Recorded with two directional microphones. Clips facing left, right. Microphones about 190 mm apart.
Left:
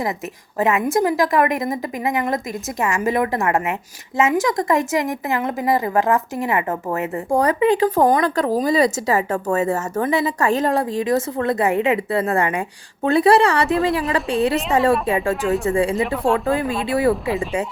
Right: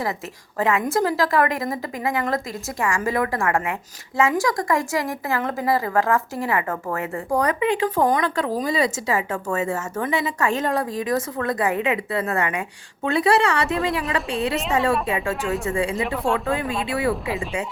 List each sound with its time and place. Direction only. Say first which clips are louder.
0.6 s a woman's voice: left 3 dB; 20° left (ahead or behind)
15.4 s speech: left 5 dB; centre (ahead or behind)
15.6 s speech: left 5 dB; 35° left (ahead or behind)
16.0 s speech: left 4 dB; centre (ahead or behind)
16.9 s speech: left 6 dB; 35° left (ahead or behind)